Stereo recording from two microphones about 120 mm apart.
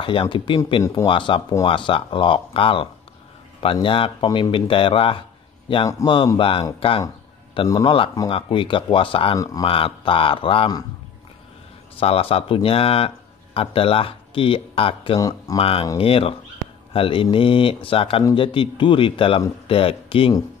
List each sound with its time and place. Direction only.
0.0 s speech: 45° left (ahead or behind)
6.0 s speech: 25° left (ahead or behind)
6.3 s speech: 50° left (ahead or behind)
7.6 s speech: 30° left (ahead or behind)
8.3 s speech: 45° left (ahead or behind)
9.4 s speech: 30° left (ahead or behind)
9.7 s speech: 50° left (ahead or behind)
12.0 s speech: 50° left (ahead or behind)
15.1 s speech: 30° left (ahead or behind)
15.5 s speech: 50° left (ahead or behind)